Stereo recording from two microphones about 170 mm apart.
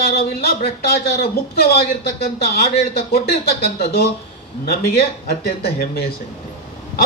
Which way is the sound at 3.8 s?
65° left (ahead or behind).